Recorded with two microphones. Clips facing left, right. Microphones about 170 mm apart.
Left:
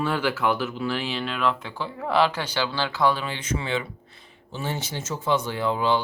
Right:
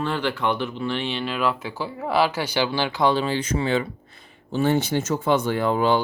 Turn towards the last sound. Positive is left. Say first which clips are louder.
# right 3 dB
turn(degrees=-50)  # may be behind; listen again after turning